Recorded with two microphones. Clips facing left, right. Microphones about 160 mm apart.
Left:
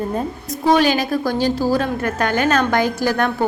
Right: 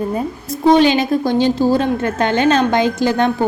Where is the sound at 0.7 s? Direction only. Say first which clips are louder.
Right 3 dB; 25° right (ahead or behind).